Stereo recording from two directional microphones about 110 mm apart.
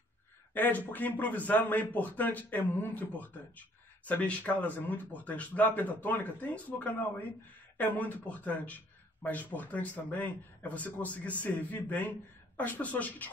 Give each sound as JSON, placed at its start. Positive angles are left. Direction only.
{"t": 0.6, "sound": "a man's voice", "side_deg": 15}